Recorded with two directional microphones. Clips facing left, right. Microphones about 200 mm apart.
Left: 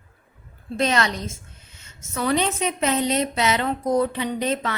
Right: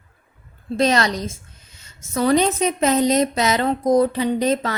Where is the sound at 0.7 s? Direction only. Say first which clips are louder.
Right 4 dB; 35° right (ahead or behind).